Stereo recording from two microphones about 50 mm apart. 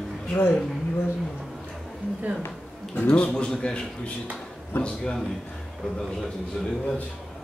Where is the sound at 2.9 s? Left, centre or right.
Left.